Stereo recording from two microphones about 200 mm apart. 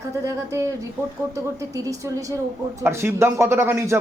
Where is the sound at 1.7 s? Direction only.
15° right (ahead or behind).